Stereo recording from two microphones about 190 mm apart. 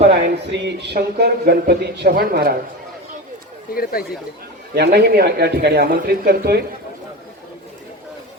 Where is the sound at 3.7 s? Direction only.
50° left (ahead or behind).